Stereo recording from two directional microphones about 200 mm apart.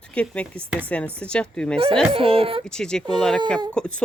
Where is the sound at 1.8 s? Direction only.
25° right (ahead or behind).